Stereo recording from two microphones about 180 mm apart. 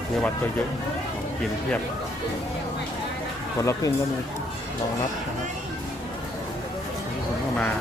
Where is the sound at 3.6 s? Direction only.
15° left (ahead or behind).